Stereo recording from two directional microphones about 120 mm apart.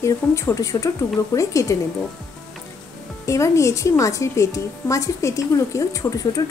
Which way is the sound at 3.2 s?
25° left (ahead or behind).